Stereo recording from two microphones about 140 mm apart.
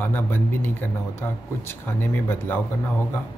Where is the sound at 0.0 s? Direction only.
15° left (ahead or behind).